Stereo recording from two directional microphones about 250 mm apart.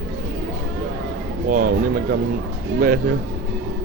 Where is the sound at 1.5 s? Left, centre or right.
Right.